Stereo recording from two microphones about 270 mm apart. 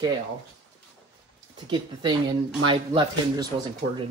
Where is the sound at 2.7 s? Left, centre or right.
Centre.